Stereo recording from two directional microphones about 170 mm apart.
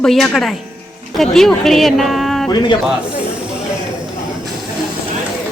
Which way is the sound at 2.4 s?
25° left (ahead or behind).